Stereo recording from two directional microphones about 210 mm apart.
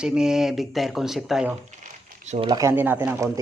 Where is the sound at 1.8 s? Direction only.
35° right (ahead or behind).